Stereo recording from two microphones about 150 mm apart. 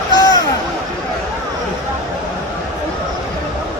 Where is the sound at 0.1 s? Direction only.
30° left (ahead or behind).